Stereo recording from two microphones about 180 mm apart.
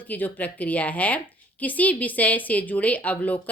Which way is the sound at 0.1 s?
10° left (ahead or behind).